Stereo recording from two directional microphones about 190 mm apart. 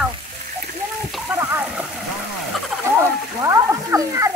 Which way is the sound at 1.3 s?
10° right (ahead or behind).